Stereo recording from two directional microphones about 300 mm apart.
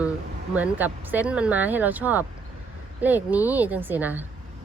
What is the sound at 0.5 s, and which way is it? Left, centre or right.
Speech, centre.